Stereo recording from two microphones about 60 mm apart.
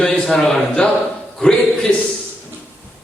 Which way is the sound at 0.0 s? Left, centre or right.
Centre.